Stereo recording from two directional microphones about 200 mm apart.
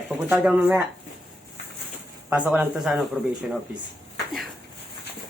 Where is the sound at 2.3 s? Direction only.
5° right (ahead or behind).